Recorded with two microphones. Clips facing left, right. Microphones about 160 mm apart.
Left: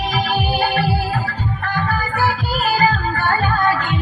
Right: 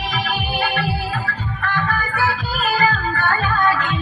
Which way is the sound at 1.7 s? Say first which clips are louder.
Left 1 dB; 35° left (ahead or behind).